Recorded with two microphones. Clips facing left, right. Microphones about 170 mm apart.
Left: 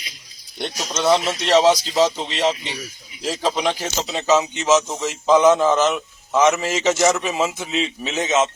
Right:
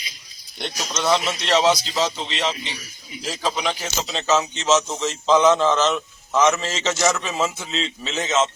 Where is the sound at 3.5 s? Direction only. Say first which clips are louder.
Left 3 dB; 20° left (ahead or behind).